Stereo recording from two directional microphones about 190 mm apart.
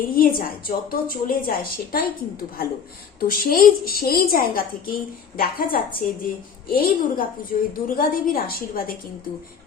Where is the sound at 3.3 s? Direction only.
50° left (ahead or behind).